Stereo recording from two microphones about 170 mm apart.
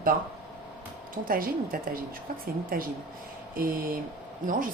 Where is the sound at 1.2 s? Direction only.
55° right (ahead or behind).